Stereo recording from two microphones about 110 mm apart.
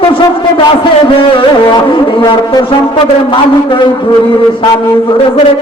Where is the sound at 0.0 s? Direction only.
50° left (ahead or behind).